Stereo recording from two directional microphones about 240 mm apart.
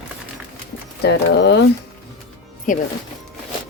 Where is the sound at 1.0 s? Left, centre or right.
Left.